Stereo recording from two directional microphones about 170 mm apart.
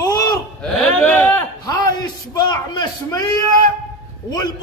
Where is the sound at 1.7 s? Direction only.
25° left (ahead or behind).